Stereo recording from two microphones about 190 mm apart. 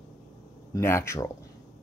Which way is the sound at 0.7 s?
15° left (ahead or behind).